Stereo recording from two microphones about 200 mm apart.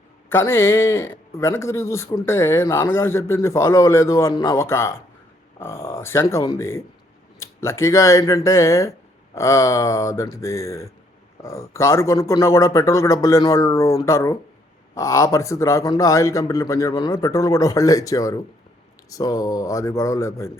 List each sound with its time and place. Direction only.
0.3 s a man's voice: 10° left (ahead or behind)